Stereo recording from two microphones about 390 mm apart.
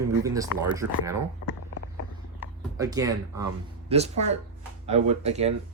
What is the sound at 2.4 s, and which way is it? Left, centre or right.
Speech, centre.